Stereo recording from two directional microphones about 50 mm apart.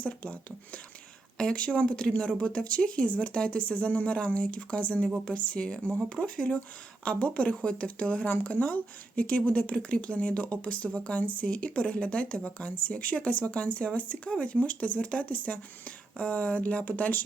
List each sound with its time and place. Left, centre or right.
0.0 s speech: left
1.5 s speech: left